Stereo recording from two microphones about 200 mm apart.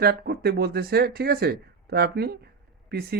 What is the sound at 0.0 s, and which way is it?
Speech, 50° right (ahead or behind).